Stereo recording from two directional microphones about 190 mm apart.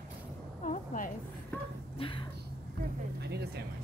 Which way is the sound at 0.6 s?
45° left (ahead or behind).